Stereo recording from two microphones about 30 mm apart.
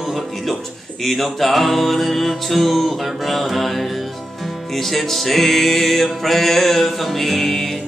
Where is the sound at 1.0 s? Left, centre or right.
Centre.